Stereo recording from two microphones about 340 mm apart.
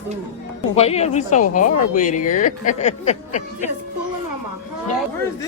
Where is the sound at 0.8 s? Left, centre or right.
Centre.